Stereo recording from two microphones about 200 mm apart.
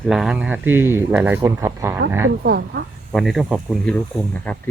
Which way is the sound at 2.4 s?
55° right (ahead or behind).